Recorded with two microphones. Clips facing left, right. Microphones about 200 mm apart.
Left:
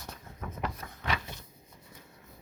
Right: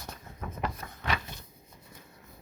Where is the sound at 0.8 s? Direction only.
40° right (ahead or behind).